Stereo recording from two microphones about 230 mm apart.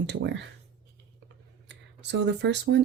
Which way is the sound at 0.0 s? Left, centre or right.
Right.